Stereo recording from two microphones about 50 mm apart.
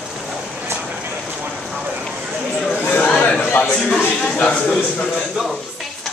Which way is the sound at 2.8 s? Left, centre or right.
Left.